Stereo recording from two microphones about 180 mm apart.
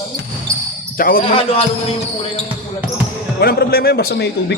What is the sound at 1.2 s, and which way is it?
Speech, 30° left (ahead or behind).